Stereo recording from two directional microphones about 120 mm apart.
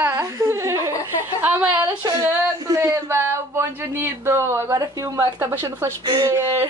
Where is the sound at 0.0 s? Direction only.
25° right (ahead or behind).